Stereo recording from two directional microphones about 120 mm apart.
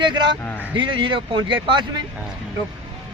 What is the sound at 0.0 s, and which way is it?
Speech, 40° right (ahead or behind).